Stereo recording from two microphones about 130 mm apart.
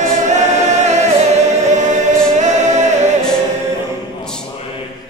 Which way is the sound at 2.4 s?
65° right (ahead or behind).